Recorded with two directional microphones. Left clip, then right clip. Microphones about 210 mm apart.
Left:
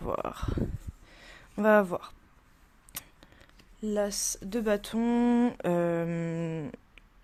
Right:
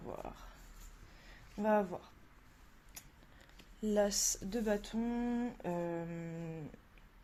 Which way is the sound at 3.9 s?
15° left (ahead or behind).